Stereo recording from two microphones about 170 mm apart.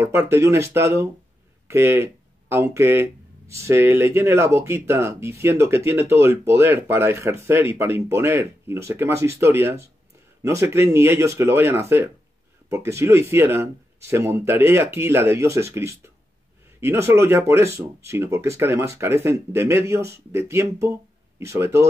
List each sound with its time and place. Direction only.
0.0 s speech: 15° right (ahead or behind)